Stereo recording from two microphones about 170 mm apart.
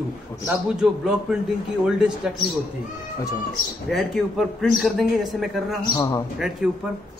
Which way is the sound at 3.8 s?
Centre (ahead or behind).